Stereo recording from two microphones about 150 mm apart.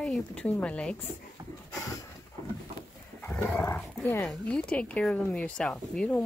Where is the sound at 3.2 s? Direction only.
15° left (ahead or behind).